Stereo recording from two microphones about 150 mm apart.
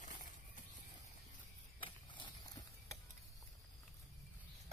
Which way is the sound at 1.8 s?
30° left (ahead or behind).